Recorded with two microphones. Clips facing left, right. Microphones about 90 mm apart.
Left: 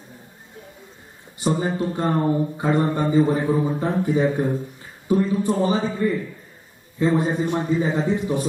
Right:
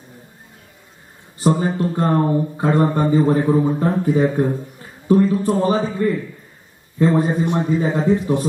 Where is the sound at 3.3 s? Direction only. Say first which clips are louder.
Right 4 dB; 5° right (ahead or behind).